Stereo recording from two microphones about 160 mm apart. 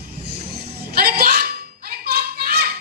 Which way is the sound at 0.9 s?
70° right (ahead or behind).